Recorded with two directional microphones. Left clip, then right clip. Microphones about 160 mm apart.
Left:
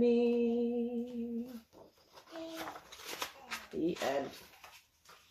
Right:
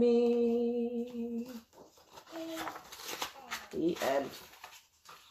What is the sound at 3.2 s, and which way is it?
Shuffling cards, 20° right (ahead or behind).